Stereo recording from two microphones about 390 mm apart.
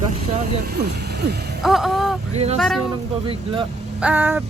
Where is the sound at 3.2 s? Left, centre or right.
Centre.